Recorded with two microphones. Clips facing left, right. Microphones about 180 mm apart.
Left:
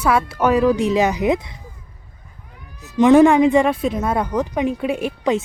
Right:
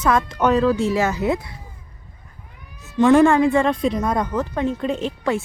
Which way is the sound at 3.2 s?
15° left (ahead or behind).